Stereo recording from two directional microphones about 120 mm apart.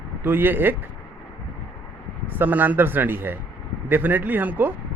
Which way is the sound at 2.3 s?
15° right (ahead or behind).